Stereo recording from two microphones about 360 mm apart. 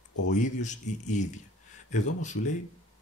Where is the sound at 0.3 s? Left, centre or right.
Centre.